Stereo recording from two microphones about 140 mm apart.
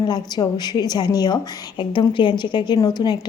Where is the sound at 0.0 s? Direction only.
30° left (ahead or behind).